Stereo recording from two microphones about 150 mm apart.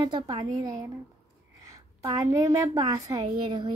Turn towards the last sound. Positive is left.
turn(degrees=-30)  # may be behind; listen again after turning